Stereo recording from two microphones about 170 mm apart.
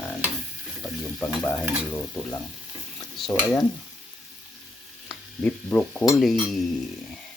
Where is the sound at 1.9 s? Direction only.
20° left (ahead or behind).